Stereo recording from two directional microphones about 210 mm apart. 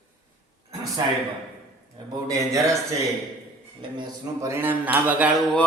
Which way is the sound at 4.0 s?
15° right (ahead or behind).